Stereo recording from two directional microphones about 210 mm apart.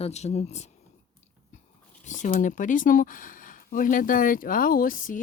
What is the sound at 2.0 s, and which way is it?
Speech, 35° left (ahead or behind).